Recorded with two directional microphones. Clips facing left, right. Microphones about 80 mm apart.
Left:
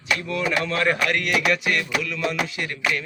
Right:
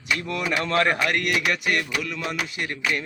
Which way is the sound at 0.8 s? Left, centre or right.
Right.